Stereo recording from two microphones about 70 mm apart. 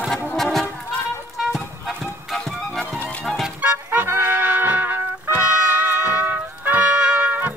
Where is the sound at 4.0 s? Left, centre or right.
Right.